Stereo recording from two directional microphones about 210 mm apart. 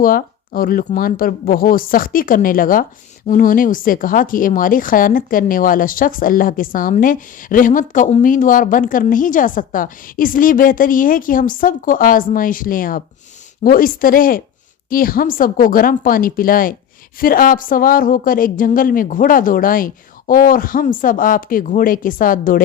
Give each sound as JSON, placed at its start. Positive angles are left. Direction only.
{"t": 0.0, "sound": "a woman's voice", "side_deg": 45}